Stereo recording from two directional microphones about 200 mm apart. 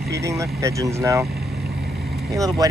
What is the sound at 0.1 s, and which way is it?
Speech, 15° right (ahead or behind).